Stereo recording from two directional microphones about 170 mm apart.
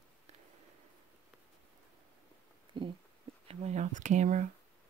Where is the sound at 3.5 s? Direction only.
40° right (ahead or behind).